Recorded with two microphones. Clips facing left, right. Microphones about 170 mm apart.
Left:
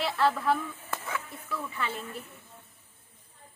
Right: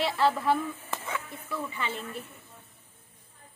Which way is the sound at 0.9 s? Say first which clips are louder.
Left 1 dB; centre (ahead or behind).